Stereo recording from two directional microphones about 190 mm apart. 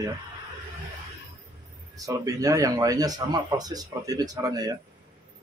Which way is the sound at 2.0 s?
20° right (ahead or behind).